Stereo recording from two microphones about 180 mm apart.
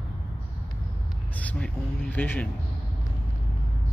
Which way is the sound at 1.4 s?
10° left (ahead or behind).